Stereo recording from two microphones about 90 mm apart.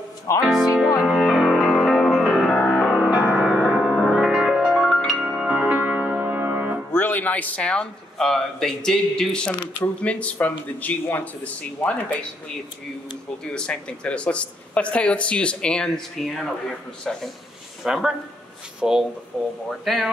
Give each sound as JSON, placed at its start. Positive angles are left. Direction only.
{"t": 0.6, "sound": "music", "side_deg": -10}
{"t": 1.1, "sound": "music", "side_deg": 0}
{"t": 2.9, "sound": "music", "side_deg": -10}
{"t": 3.7, "sound": "music", "side_deg": 0}
{"t": 5.2, "sound": "music", "side_deg": -10}
{"t": 6.9, "sound": "speech", "side_deg": 20}
{"t": 13.4, "sound": "speech", "side_deg": 10}